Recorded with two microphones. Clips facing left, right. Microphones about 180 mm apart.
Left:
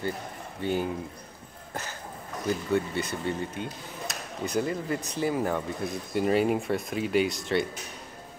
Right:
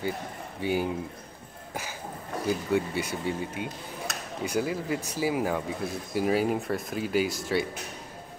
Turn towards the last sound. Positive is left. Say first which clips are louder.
# left 1 dB
turn(degrees=-5)  # may be behind; listen again after turning